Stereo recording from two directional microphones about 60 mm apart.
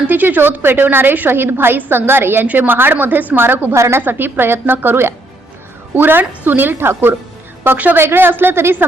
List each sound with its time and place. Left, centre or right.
0.1 s a woman's voice: right
3.8 s a woman's voice: right
4.0 s a woman's voice: right